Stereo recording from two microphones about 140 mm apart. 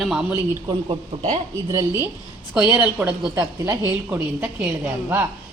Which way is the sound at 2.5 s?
10° right (ahead or behind).